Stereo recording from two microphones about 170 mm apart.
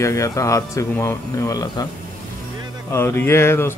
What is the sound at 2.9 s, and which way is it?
Speech, 10° left (ahead or behind).